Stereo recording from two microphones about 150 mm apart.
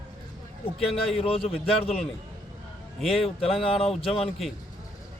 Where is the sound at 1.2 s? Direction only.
40° left (ahead or behind).